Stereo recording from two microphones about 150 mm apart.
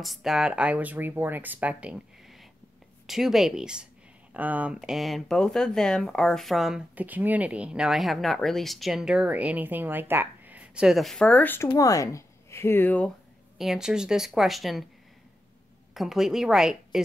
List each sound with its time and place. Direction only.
0.0 s speech: centre (ahead or behind)
13.6 s speech: 5° right (ahead or behind)
15.9 s speech: centre (ahead or behind)